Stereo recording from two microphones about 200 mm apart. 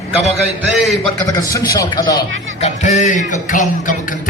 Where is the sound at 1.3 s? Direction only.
15° left (ahead or behind).